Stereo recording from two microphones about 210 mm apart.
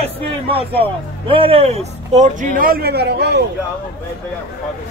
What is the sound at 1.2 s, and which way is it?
A man's voice, 25° right (ahead or behind).